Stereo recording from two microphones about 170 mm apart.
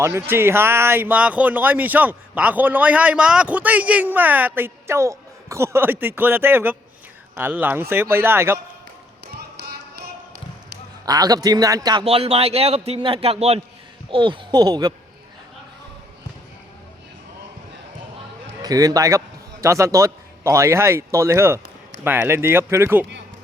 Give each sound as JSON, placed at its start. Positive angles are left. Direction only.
{"t": 0.0, "sound": "speech", "side_deg": -15}
{"t": 11.0, "sound": "a man's voice", "side_deg": -20}
{"t": 12.0, "sound": "a man's voice", "side_deg": -35}
{"t": 18.6, "sound": "a man's voice", "side_deg": -20}